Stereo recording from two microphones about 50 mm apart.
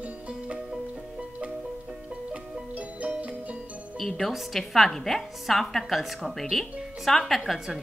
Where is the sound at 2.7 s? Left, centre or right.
Right.